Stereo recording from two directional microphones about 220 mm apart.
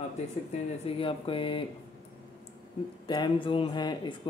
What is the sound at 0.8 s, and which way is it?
Speech, 25° left (ahead or behind).